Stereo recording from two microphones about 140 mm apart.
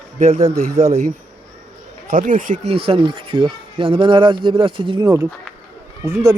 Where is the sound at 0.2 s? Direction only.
55° right (ahead or behind).